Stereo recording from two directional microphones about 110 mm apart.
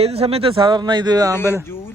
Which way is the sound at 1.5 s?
20° left (ahead or behind).